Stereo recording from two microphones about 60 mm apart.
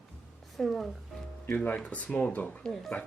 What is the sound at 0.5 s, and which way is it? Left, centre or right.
Speech, centre.